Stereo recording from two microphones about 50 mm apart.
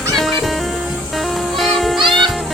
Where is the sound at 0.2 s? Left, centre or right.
Centre.